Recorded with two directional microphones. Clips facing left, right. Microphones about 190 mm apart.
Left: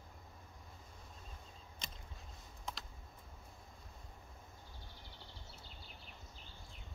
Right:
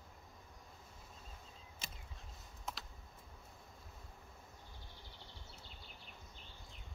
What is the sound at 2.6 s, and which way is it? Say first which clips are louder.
Computer keyboard: even; centre (ahead or behind).